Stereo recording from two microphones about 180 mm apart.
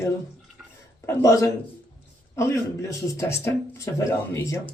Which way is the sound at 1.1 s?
15° left (ahead or behind).